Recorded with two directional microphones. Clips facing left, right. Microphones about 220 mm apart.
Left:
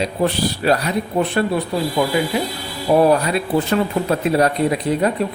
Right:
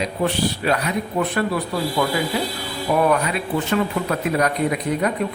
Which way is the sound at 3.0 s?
30° left (ahead or behind).